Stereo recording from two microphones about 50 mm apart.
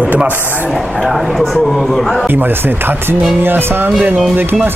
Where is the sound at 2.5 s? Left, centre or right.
Right.